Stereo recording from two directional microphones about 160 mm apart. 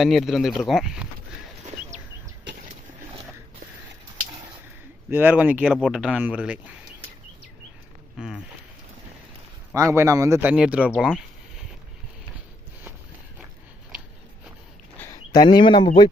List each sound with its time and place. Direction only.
0.0 s speech: centre (ahead or behind)
5.1 s speech: 10° right (ahead or behind)
8.2 s speech: 5° right (ahead or behind)
9.7 s speech: 15° right (ahead or behind)
10.5 s speech: 5° right (ahead or behind)
11.0 s a sound: 5° right (ahead or behind)
14.9 s a sound: 20° left (ahead or behind)